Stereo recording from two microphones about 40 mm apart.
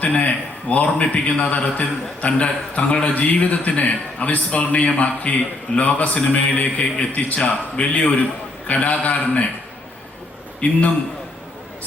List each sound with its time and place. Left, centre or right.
0.0 s a man's voice: left
10.6 s a man's voice: left